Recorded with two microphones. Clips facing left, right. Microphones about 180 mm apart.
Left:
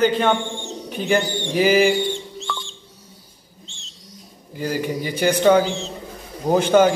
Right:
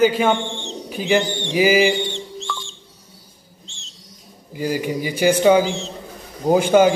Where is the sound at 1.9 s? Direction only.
5° left (ahead or behind).